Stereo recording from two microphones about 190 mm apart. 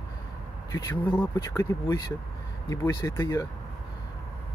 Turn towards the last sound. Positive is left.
turn(degrees=20)  # may be behind; listen again after turning